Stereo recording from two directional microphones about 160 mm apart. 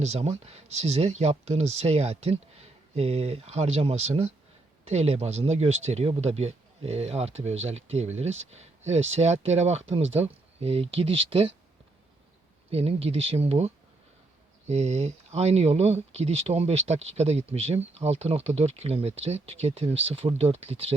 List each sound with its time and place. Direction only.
0.0 s speech: 40° right (ahead or behind)
12.7 s speech: 40° right (ahead or behind)